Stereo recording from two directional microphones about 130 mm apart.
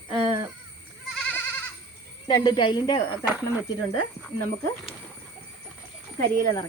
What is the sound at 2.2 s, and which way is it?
Speech, 30° left (ahead or behind).